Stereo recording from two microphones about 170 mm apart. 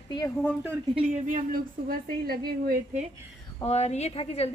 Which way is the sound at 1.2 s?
55° right (ahead or behind).